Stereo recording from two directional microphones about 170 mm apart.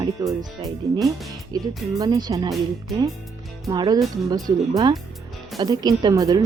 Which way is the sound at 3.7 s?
20° right (ahead or behind).